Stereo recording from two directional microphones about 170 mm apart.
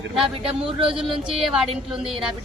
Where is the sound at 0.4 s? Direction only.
30° right (ahead or behind).